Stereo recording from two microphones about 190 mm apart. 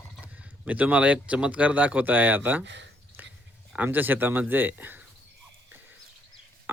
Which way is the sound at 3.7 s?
10° right (ahead or behind).